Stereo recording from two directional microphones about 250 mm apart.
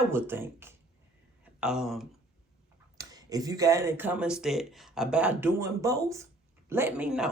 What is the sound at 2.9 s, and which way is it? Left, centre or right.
Speech, centre.